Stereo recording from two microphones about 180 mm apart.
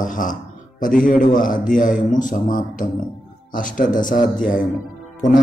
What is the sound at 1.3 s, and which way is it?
Speech, 50° left (ahead or behind).